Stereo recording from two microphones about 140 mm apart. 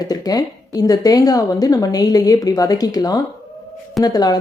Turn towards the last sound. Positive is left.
turn(degrees=30)  # may be behind; listen again after turning